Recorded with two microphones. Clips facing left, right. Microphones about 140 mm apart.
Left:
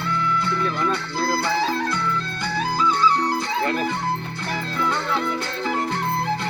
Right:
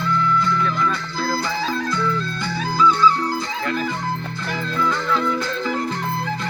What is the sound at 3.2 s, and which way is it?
Music, 20° left (ahead or behind).